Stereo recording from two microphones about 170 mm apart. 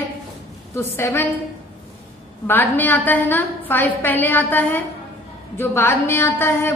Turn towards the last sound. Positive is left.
turn(degrees=15)  # may be behind; listen again after turning